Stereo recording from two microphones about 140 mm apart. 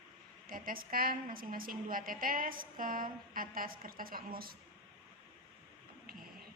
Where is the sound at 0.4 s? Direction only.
90° right.